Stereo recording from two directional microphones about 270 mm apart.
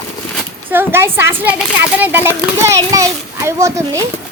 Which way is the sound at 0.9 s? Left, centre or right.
Centre.